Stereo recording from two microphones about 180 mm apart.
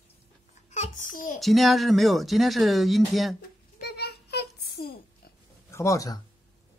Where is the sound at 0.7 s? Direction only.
45° left (ahead or behind).